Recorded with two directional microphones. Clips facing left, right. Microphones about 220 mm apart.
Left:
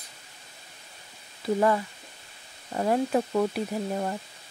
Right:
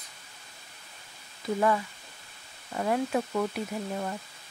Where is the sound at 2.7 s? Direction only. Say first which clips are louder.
Left 3 dB; 35° left (ahead or behind).